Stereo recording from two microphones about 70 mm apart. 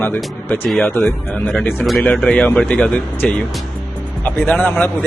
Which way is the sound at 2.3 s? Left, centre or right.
Centre.